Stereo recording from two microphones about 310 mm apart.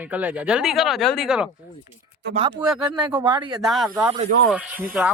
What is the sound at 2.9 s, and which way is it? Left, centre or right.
Speech, centre.